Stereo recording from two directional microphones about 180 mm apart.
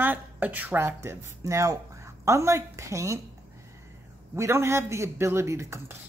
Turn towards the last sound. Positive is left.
turn(degrees=-15)  # may be behind; listen again after turning